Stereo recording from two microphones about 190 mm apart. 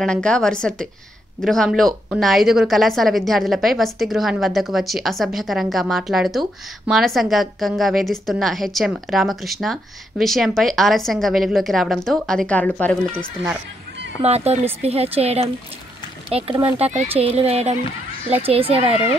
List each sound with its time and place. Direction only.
0.0 s a woman's voice: 5° left (ahead or behind)
14.2 s speech: 35° right (ahead or behind)